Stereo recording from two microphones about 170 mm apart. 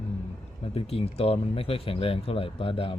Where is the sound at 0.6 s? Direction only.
35° left (ahead or behind).